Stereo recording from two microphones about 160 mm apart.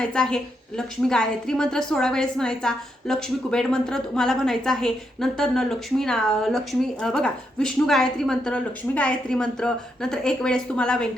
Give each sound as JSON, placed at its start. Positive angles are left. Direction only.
{"t": 0.0, "sound": "a woman's voice", "side_deg": 5}